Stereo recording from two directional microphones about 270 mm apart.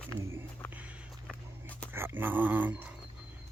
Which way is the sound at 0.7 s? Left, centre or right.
Centre.